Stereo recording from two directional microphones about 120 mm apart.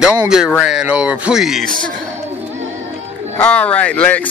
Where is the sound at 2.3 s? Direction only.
15° right (ahead or behind).